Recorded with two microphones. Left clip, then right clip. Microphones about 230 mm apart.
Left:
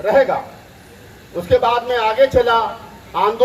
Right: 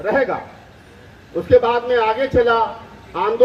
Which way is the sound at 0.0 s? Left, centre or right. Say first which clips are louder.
Left 4 dB; left.